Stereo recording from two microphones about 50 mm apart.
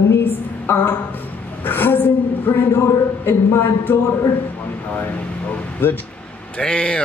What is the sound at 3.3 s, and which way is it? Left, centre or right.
Speech, left.